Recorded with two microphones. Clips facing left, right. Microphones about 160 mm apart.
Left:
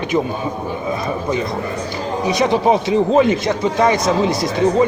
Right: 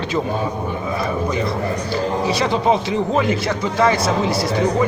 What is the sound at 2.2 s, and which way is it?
Speech, 20° left (ahead or behind).